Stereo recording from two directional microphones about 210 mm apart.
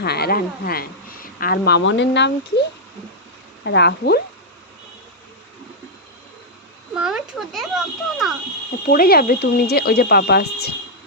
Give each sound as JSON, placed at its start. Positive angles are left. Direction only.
{"t": 0.0, "sound": "speech", "side_deg": 50}
{"t": 6.9, "sound": "speech", "side_deg": -5}
{"t": 8.9, "sound": "speech", "side_deg": 45}